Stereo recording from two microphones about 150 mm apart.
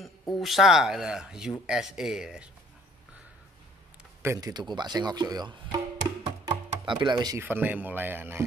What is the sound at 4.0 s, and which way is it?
Speech, 15° right (ahead or behind).